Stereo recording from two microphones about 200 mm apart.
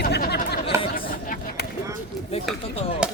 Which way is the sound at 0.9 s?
45° left (ahead or behind).